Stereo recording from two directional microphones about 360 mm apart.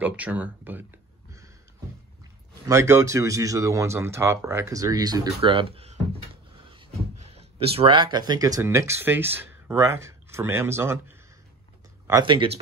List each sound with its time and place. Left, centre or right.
0.0 s speech: centre
2.6 s speech: centre
7.2 s speech: centre
12.1 s speech: centre